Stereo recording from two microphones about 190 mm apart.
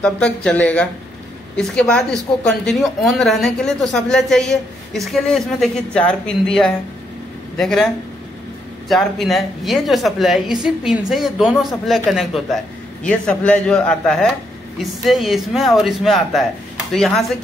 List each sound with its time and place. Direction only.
0.0 s a woman's voice: 5° left (ahead or behind)
13.3 s a woman's voice: 5° left (ahead or behind)